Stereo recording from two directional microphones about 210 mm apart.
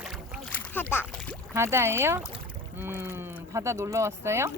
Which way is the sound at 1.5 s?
10° right (ahead or behind).